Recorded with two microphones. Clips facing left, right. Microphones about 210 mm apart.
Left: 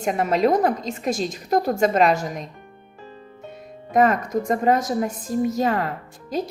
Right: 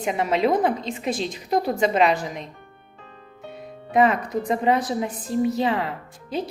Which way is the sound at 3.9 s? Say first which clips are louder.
Left 1 dB; 40° left (ahead or behind).